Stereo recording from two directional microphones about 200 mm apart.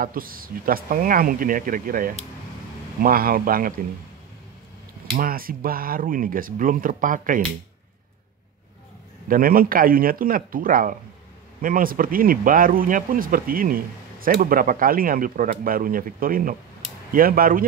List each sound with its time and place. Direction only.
0.0 s speech: 45° right (ahead or behind)
5.1 s speech: 45° right (ahead or behind)
9.3 s speech: 45° right (ahead or behind)